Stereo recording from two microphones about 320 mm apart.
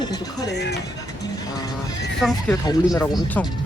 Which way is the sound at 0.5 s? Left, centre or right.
Left.